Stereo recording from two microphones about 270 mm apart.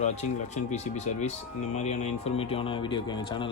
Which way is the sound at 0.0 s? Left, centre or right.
Left.